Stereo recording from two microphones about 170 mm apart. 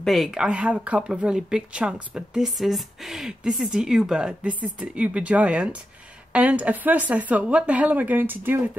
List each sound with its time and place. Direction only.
0.0 s speech: centre (ahead or behind)